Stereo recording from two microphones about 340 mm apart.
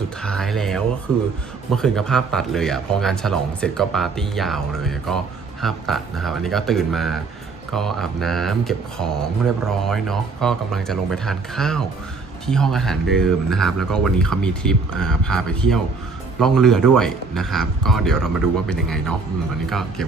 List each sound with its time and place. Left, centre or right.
0.2 s speech: centre